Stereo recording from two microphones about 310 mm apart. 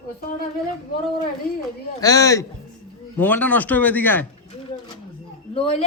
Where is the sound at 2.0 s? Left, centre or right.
Centre.